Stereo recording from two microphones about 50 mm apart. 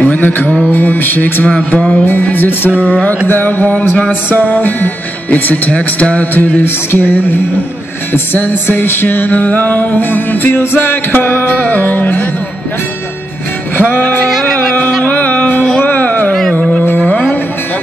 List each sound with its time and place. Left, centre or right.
0.0 s music: left
1.5 s music: left
2.9 s music: left
3.3 s music: left
6.6 s music: left
13.7 s music: left
15.1 s music: left
16.3 s a sound: centre